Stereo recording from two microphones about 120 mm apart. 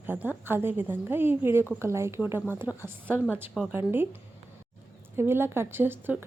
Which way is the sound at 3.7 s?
20° right (ahead or behind).